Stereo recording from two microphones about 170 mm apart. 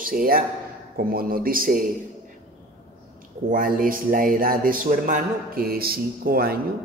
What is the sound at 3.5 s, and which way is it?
Speech, 55° right (ahead or behind).